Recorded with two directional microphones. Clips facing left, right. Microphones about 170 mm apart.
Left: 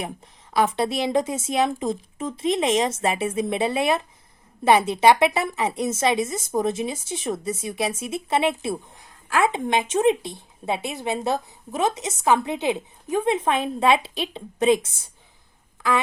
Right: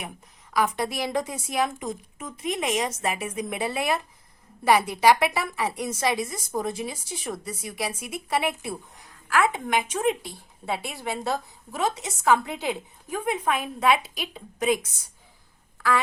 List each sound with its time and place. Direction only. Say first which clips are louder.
0.5 s speech: left 4 dB; 25° left (ahead or behind)